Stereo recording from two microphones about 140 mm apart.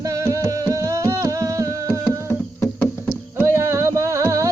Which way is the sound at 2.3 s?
15° left (ahead or behind).